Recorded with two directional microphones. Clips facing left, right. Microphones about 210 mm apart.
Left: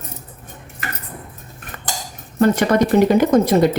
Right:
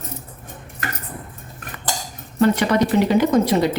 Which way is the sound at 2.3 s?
45° left (ahead or behind).